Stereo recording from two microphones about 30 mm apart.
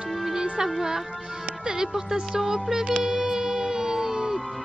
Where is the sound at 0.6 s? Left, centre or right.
Centre.